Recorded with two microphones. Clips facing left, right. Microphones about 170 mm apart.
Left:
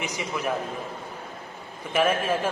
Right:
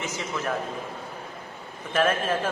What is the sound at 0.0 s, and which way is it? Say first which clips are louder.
Speech: left 1 dB; 15° left (ahead or behind).